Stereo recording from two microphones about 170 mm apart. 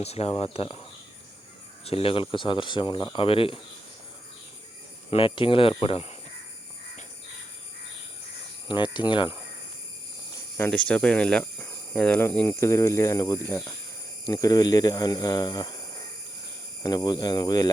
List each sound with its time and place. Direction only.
0.0 s speech: 35° left (ahead or behind)
5.1 s speech: 30° left (ahead or behind)
8.6 s speech: 25° left (ahead or behind)
10.6 s speech: 10° left (ahead or behind); by 15.8 s 25° left (ahead or behind)
16.8 s speech: 25° left (ahead or behind)